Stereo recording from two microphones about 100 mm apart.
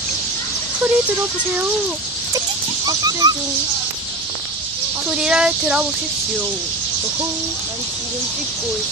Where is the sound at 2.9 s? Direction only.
40° right (ahead or behind).